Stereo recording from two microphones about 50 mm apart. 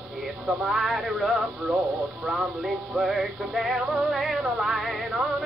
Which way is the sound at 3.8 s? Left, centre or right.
Centre.